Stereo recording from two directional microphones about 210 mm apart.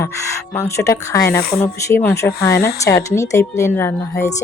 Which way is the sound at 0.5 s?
15° left (ahead or behind).